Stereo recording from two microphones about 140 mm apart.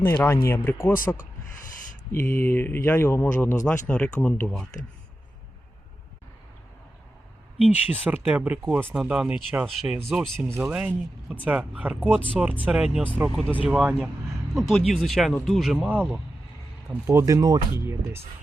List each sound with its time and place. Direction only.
0.4 s speech: 15° left (ahead or behind)
0.9 s speech: 70° left (ahead or behind)
2.1 s speech: 15° left (ahead or behind)
7.6 s speech: 10° right (ahead or behind)
10.6 s speech: 10° right (ahead or behind)